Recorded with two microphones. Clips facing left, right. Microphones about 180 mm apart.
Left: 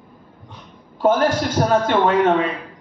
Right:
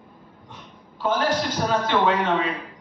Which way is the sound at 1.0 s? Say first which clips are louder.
Left 6 dB; 50° left (ahead or behind).